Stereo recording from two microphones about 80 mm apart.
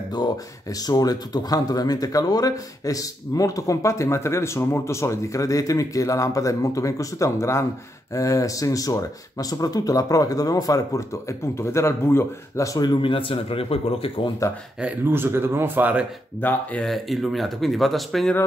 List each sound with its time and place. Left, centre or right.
0.1 s speech: left
14.4 s speech: left
15.0 s speech: right
16.3 s speech: centre
16.8 s speech: centre